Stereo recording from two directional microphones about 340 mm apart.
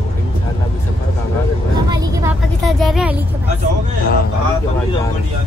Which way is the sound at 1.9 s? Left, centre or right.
Centre.